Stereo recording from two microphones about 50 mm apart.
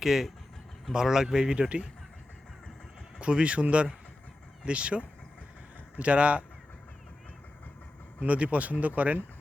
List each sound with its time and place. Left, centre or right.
0.0 s speech: centre
3.2 s speech: right
8.2 s speech: right